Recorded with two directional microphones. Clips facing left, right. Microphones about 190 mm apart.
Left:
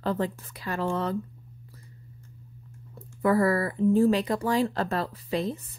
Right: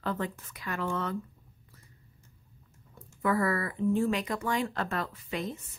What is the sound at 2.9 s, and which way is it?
A woman's voice, 35° left (ahead or behind).